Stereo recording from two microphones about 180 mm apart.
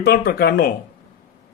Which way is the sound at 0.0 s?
60° left (ahead or behind).